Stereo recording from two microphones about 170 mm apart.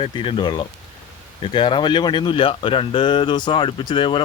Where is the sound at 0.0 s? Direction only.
30° left (ahead or behind).